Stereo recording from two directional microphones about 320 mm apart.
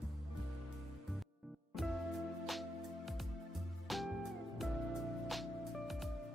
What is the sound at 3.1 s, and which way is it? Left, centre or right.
Music, centre.